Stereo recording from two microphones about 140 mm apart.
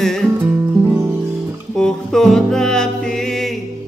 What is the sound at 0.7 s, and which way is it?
Music, 15° right (ahead or behind).